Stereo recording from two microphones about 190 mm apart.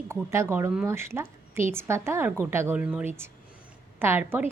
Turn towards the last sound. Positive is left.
turn(degrees=-10)  # may be behind; listen again after turning